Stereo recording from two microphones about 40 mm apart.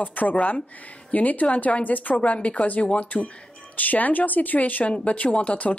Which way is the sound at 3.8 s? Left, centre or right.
Left.